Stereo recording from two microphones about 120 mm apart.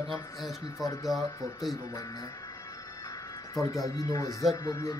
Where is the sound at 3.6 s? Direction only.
30° left (ahead or behind).